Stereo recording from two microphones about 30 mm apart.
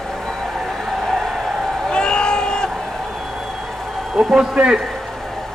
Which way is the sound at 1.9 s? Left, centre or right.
Left.